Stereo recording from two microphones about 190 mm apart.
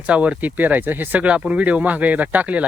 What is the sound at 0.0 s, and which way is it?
Speech, 5° right (ahead or behind).